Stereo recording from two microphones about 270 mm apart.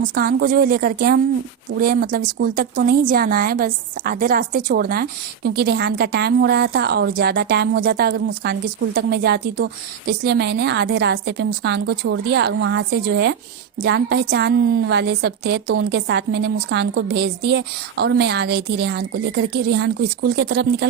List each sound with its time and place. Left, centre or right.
0.1 s a woman's voice: right